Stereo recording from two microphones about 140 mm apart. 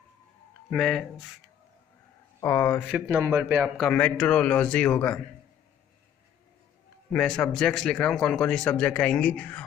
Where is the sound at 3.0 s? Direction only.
20° right (ahead or behind).